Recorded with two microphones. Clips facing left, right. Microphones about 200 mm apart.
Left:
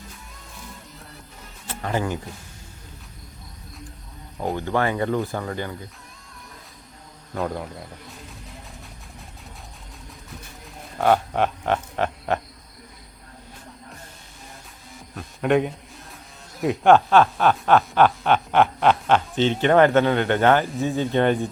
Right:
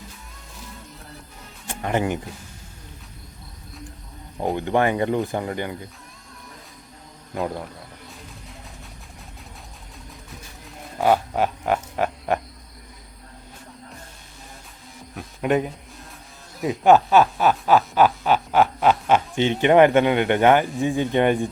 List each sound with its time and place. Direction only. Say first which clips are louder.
1.6 s music: right 2 dB; 20° right (ahead or behind)
4.5 s speech: right 3 dB; 20° right (ahead or behind)
7.3 s speech: even; 5° right (ahead or behind)
10.9 s speech: even; 5° right (ahead or behind)
15.1 s a sound: left 1 dB; 5° right (ahead or behind)
16.6 s speech: even; centre (ahead or behind)